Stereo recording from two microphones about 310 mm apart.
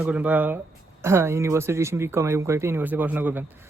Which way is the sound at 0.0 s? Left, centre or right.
Centre.